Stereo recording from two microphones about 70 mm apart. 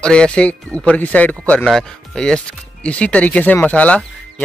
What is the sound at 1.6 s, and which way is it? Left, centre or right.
Speech, centre.